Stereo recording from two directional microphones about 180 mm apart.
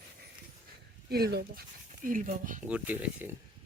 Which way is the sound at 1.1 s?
60° right (ahead or behind).